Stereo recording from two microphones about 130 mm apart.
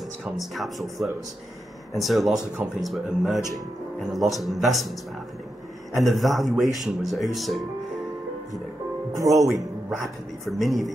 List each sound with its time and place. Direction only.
0.2 s a man's voice: centre (ahead or behind)
5.9 s a man's voice: centre (ahead or behind)
9.2 s speech: 25° right (ahead or behind)
9.8 s a man's voice: centre (ahead or behind)